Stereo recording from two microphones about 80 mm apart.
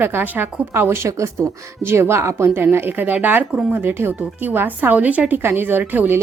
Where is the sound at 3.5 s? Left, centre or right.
Centre.